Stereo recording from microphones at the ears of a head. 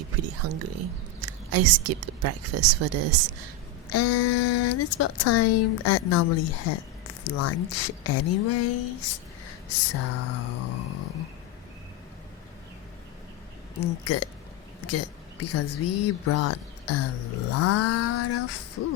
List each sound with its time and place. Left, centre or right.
0.0 s speech: right
3.8 s speech: left
13.7 s speech: left